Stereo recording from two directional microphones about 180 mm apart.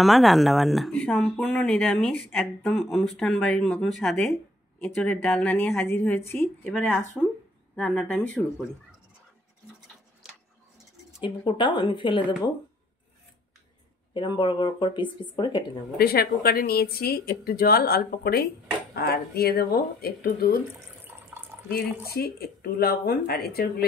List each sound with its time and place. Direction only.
0.0 s speech: centre (ahead or behind)
11.2 s speech: 25° left (ahead or behind)
14.1 s speech: 25° left (ahead or behind)
16.0 s speech: 55° left (ahead or behind)
21.0 s water tap: 10° right (ahead or behind)
21.7 s speech: 60° left (ahead or behind)